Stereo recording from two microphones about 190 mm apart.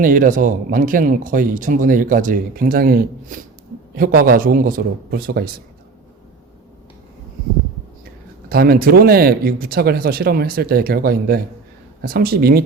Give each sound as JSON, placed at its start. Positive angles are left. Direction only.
{"t": 0.0, "sound": "speech", "side_deg": -45}
{"t": 8.4, "sound": "speech", "side_deg": -50}